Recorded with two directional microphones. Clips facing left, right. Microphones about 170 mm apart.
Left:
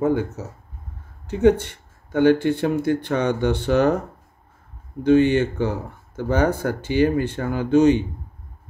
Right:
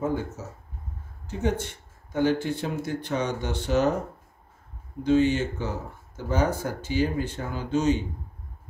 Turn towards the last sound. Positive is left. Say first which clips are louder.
# left 8 dB
turn(degrees=60)  # may be behind; listen again after turning